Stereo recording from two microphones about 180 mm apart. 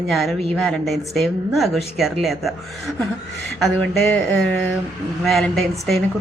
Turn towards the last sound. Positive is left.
turn(degrees=0)  # may be behind; listen again after turning